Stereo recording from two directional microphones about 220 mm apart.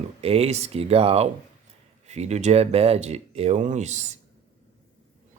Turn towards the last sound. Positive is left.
turn(degrees=-30)  # may be behind; listen again after turning